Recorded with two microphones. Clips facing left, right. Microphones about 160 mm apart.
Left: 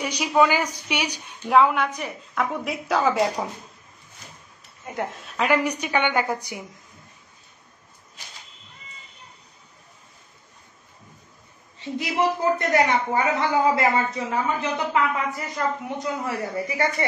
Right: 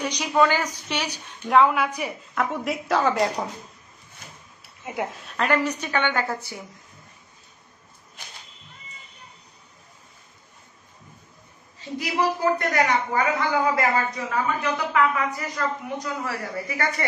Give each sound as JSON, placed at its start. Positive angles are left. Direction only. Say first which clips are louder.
{"t": 0.0, "sound": "a woman's voice", "louder": "left 1 dB", "side_deg": 10}
{"t": 1.5, "sound": "a woman's voice", "louder": "even", "side_deg": 0}
{"t": 1.9, "sound": "a woman's voice", "louder": "right 2 dB", "side_deg": -10}
{"t": 2.3, "sound": "a woman's voice", "louder": "even", "side_deg": 0}
{"t": 4.9, "sound": "a woman's voice", "louder": "right 1 dB", "side_deg": -5}
{"t": 5.4, "sound": "a woman's voice", "louder": "left 1 dB", "side_deg": 10}
{"t": 12.0, "sound": "a woman's voice", "louder": "even", "side_deg": 25}